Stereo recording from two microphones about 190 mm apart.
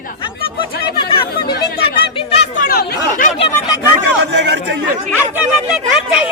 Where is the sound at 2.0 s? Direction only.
30° left (ahead or behind).